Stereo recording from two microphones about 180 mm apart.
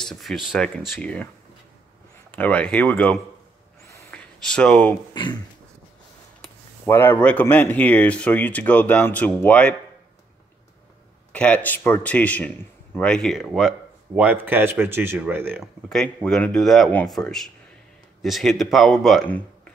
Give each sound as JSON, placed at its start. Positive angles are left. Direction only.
{"t": 0.0, "sound": "a man's voice", "side_deg": 0}
{"t": 2.3, "sound": "speech", "side_deg": 10}
{"t": 4.1, "sound": "a sound", "side_deg": 5}
{"t": 5.1, "sound": "speech", "side_deg": 25}
{"t": 6.9, "sound": "speech", "side_deg": 10}
{"t": 11.3, "sound": "a man's voice", "side_deg": 5}
{"t": 15.9, "sound": "a man's voice", "side_deg": 5}